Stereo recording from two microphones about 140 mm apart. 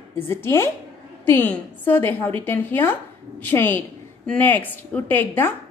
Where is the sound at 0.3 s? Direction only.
20° left (ahead or behind).